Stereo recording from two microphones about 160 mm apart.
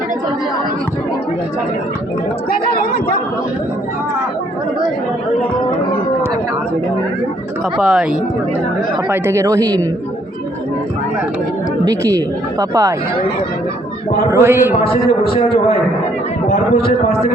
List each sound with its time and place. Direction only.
7.8 s speech: 5° right (ahead or behind)
9.0 s speech: 15° right (ahead or behind)
11.9 s speech: 20° right (ahead or behind)
14.3 s a man's voice: 15° right (ahead or behind)
16.5 s a man's voice: 75° left (ahead or behind)